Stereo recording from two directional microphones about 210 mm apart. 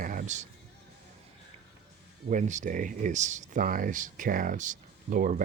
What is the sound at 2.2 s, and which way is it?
Speech, 35° right (ahead or behind).